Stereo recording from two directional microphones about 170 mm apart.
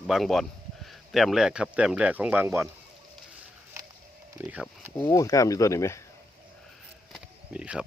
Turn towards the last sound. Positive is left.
turn(degrees=-5)  # may be behind; listen again after turning